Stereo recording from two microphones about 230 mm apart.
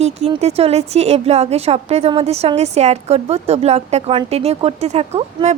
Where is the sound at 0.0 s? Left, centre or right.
Right.